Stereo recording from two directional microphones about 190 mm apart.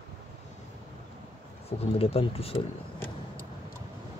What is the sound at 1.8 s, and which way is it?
Speech, 30° left (ahead or behind).